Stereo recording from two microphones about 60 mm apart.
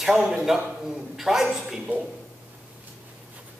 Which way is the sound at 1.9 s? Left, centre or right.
Right.